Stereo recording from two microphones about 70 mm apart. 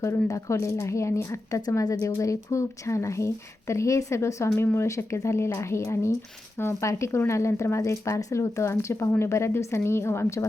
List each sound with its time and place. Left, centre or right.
0.3 s speech: left